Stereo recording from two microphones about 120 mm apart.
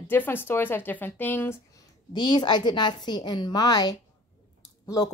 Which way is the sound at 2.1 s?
40° left (ahead or behind).